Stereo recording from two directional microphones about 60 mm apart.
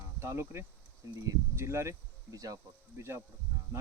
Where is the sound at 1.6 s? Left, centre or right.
Right.